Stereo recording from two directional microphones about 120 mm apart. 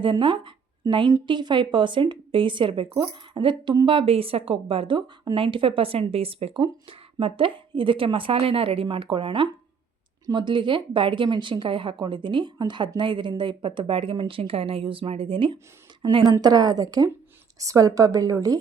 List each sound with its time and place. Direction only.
0.0 s a woman's voice: 45° right (ahead or behind)